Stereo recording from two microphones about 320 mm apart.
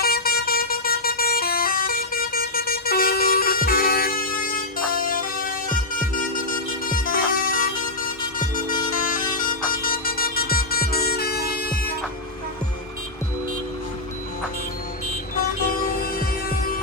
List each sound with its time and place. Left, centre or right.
0.0 s vehicle: left
6.8 s music: left
15.4 s music: left